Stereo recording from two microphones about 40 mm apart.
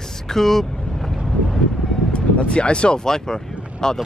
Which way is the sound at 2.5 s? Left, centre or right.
Left.